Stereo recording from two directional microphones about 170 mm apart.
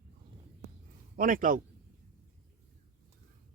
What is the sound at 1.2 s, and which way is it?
Speech, 55° right (ahead or behind).